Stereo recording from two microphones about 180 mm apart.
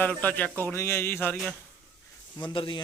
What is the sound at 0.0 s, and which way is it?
Speech, 10° left (ahead or behind).